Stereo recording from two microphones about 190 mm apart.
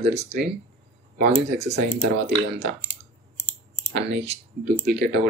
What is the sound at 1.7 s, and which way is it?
Speech, 60° right (ahead or behind).